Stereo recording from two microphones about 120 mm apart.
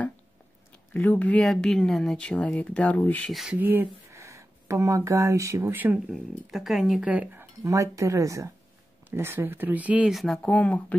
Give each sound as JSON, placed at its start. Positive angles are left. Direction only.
{"t": 0.9, "sound": "speech", "side_deg": 15}
{"t": 3.3, "sound": "speech", "side_deg": 0}
{"t": 3.5, "sound": "speech", "side_deg": -15}
{"t": 6.1, "sound": "speech", "side_deg": 0}
{"t": 7.1, "sound": "speech", "side_deg": -15}
{"t": 7.6, "sound": "speech", "side_deg": -25}
{"t": 10.1, "sound": "speech", "side_deg": 5}